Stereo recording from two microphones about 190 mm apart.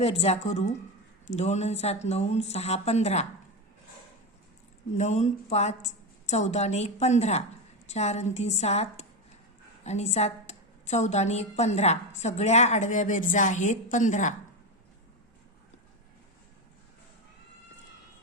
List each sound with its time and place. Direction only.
0.0 s a woman's voice: 30° left (ahead or behind)
4.9 s a woman's voice: 35° left (ahead or behind)